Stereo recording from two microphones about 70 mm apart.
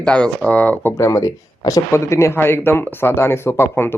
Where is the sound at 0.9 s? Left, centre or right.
Left.